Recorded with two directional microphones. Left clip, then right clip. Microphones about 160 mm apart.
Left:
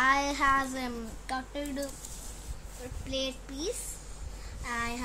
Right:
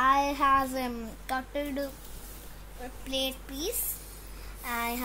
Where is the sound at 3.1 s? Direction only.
60° right (ahead or behind).